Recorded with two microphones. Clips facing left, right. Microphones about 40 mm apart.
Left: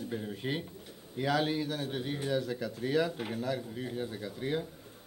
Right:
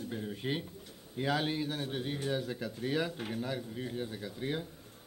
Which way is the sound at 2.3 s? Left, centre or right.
Centre.